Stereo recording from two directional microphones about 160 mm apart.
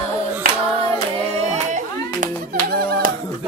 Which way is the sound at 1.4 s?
45° right (ahead or behind).